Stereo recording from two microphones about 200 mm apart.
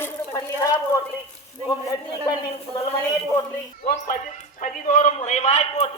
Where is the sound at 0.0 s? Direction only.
15° left (ahead or behind).